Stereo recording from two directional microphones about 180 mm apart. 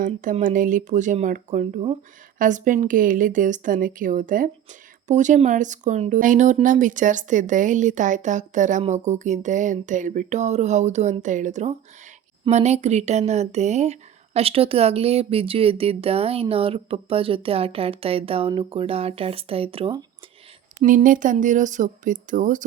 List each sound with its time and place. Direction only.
0.0 s speech: 45° right (ahead or behind)
20.8 s speech: 50° right (ahead or behind)